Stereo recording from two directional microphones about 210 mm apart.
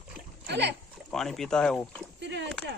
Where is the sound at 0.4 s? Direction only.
55° right (ahead or behind).